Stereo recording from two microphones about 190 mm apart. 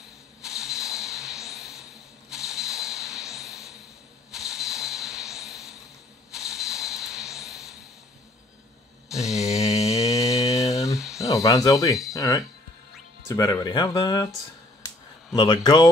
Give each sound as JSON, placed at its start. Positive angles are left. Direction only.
{"t": 0.4, "sound": "a sound", "side_deg": -5}
{"t": 9.1, "sound": "mantra", "side_deg": 0}
{"t": 9.6, "sound": "mantra", "side_deg": 15}
{"t": 11.0, "sound": "a sound", "side_deg": 0}
{"t": 11.2, "sound": "speech", "side_deg": 20}
{"t": 15.3, "sound": "speech", "side_deg": 20}